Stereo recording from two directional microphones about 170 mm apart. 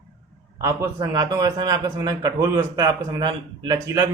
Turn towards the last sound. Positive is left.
turn(degrees=-20)  # may be behind; listen again after turning